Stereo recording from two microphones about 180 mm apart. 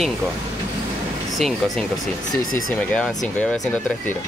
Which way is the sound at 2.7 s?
5° left (ahead or behind).